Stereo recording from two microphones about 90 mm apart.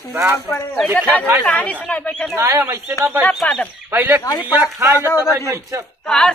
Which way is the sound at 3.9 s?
20° right (ahead or behind).